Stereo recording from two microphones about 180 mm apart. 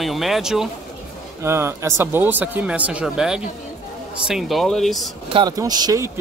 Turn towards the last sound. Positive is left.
turn(degrees=-20)  # may be behind; listen again after turning